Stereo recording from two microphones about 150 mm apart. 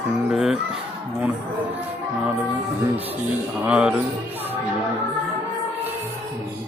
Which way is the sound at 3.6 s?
10° right (ahead or behind).